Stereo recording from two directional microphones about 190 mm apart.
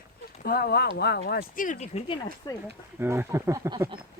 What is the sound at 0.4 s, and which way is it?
Speech, 55° left (ahead or behind).